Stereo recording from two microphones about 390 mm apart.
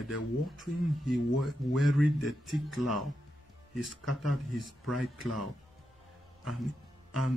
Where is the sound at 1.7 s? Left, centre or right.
Centre.